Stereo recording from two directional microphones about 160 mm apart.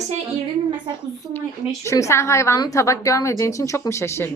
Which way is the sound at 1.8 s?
20° left (ahead or behind).